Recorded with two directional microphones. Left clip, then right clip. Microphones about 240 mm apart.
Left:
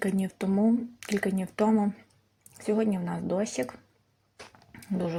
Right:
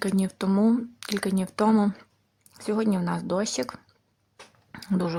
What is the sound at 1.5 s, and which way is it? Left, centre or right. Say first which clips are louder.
Speech: right 3 dB; centre.